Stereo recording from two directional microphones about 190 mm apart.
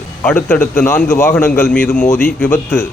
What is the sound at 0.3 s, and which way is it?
Speech, 10° left (ahead or behind).